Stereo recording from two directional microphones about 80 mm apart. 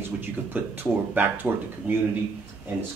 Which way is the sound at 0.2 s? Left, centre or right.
Right.